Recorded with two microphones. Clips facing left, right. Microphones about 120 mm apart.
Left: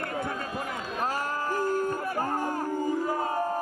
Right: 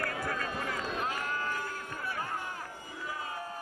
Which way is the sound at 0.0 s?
25° left (ahead or behind).